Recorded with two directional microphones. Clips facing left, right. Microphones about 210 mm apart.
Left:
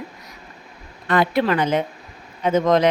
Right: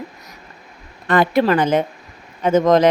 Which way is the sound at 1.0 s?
50° right (ahead or behind).